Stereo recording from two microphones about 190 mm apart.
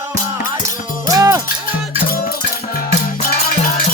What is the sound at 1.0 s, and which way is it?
Cowbell, 15° right (ahead or behind).